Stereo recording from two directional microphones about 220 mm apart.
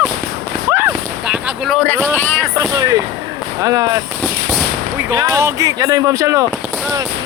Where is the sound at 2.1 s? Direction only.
5° left (ahead or behind).